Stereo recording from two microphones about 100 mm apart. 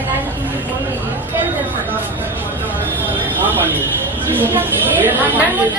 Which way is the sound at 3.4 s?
20° right (ahead or behind).